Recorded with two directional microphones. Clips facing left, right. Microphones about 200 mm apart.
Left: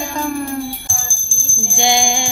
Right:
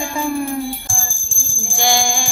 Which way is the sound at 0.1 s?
10° right (ahead or behind).